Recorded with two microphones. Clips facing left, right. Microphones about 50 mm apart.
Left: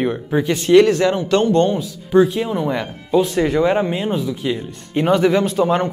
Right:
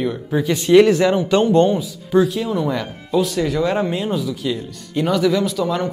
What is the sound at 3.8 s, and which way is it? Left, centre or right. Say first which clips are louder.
Speech: left 1 dB; centre.